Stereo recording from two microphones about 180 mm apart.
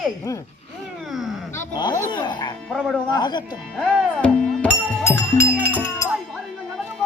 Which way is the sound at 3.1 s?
25° left (ahead or behind).